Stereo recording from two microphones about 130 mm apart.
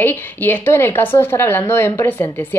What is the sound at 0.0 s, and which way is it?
Speech, 15° left (ahead or behind).